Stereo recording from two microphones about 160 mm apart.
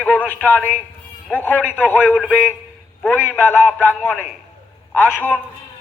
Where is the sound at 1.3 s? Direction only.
10° left (ahead or behind).